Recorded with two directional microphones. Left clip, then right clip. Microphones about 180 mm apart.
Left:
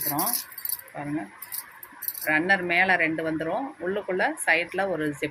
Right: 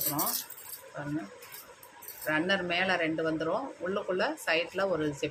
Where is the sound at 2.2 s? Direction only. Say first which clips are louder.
Left 6 dB; 15° left (ahead or behind).